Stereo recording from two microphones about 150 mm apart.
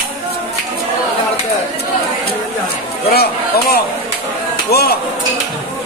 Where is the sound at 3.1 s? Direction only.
90° left.